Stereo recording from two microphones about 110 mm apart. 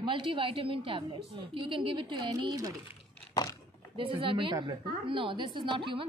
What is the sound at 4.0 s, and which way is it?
A woman's voice, 55° right (ahead or behind).